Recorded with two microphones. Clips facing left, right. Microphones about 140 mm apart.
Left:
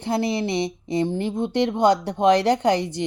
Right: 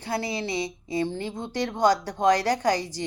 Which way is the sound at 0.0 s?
20° left (ahead or behind).